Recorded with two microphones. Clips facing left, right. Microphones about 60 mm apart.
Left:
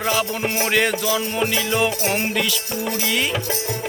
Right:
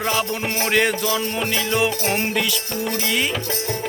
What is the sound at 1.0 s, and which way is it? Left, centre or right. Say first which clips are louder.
Music: left 1 dB; centre.